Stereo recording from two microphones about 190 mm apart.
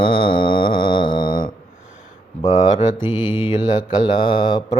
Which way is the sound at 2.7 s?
40° left (ahead or behind).